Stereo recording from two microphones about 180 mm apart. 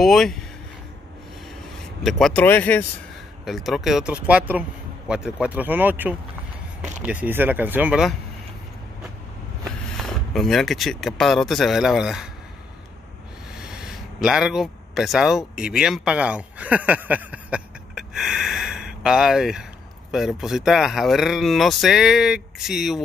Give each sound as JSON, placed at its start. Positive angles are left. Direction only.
{"t": 0.0, "sound": "speech", "side_deg": 0}
{"t": 2.0, "sound": "speech", "side_deg": 0}
{"t": 3.4, "sound": "speech", "side_deg": 0}
{"t": 9.7, "sound": "speech", "side_deg": 0}
{"t": 13.6, "sound": "speech", "side_deg": -5}